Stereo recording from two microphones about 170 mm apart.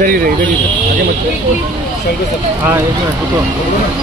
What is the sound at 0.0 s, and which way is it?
Speech, 55° right (ahead or behind).